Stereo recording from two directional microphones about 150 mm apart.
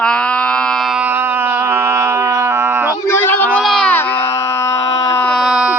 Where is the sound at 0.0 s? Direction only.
5° left (ahead or behind); by 3.0 s 15° right (ahead or behind).